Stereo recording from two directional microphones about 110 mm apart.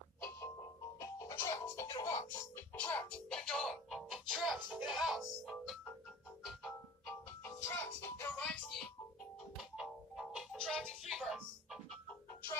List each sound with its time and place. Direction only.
0.9 s music: 30° left (ahead or behind)
2.7 s music: 15° left (ahead or behind)
7.4 s music: 20° left (ahead or behind)
9.6 s music: 5° right (ahead or behind)